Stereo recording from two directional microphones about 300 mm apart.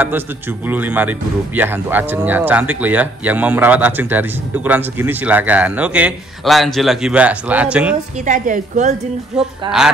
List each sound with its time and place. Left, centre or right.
0.7 s speech: centre
8.3 s a woman's voice: right
9.7 s speech: centre